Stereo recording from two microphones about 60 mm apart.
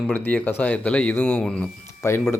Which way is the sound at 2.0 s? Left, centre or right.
Left.